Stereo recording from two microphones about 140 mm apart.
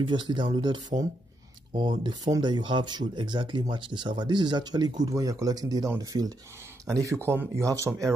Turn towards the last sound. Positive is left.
turn(degrees=-20)  # may be behind; listen again after turning